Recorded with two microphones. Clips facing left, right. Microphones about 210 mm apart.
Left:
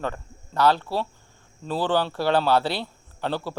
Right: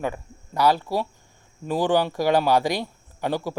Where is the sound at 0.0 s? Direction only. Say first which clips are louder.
Right 2 dB; 10° right (ahead or behind).